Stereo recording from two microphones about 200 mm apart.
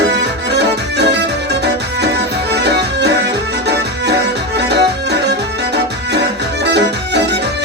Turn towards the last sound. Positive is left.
turn(degrees=-60)  # may be behind; listen again after turning